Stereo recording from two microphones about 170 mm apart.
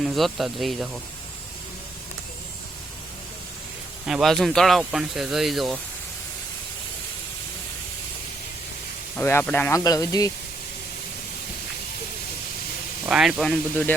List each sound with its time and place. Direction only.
0.0 s speech: centre (ahead or behind)
4.0 s speech: centre (ahead or behind)
9.1 s speech: 10° left (ahead or behind)
13.1 s speech: 5° right (ahead or behind)